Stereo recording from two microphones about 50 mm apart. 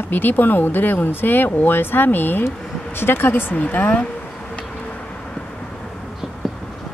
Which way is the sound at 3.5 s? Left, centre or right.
Left.